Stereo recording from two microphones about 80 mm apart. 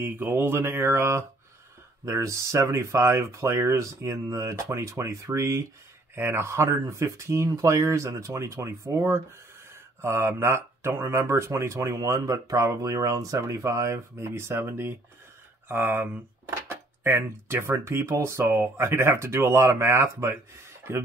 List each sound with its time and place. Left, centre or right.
0.0 s mantra: right
2.0 s speech: right
15.7 s mantra: right
17.0 s speech: right